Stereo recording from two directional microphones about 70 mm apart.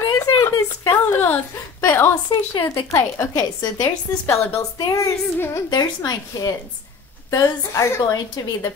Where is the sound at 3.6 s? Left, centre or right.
Left.